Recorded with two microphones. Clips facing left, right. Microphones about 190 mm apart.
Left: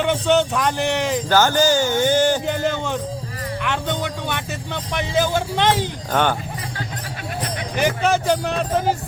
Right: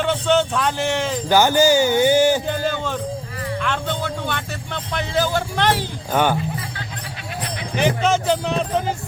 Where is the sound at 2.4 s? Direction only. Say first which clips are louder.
Left 1 dB; 20° left (ahead or behind).